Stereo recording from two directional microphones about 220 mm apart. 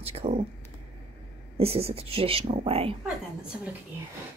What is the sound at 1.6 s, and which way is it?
Speech, 25° right (ahead or behind).